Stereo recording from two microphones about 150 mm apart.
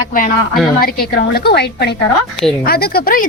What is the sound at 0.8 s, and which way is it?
A woman's voice, 90° left.